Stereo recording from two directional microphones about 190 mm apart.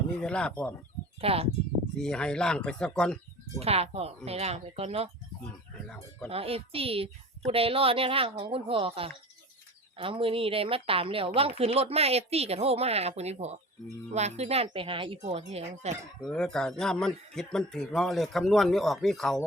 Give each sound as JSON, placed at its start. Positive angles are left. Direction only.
{"t": 0.2, "sound": "speech", "side_deg": 5}
{"t": 1.2, "sound": "speech", "side_deg": -30}
{"t": 2.0, "sound": "speech", "side_deg": 5}
{"t": 3.6, "sound": "speech", "side_deg": -30}
{"t": 6.2, "sound": "a woman's voice", "side_deg": -30}
{"t": 16.2, "sound": "speech", "side_deg": 5}